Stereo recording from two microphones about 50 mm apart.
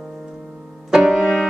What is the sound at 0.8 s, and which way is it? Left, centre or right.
Music, centre.